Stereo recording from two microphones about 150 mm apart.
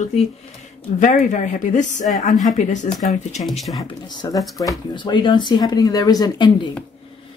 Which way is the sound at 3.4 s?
Centre (ahead or behind).